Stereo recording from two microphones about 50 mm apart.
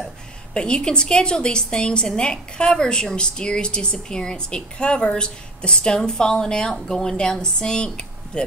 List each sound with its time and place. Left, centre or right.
0.6 s a woman's voice: centre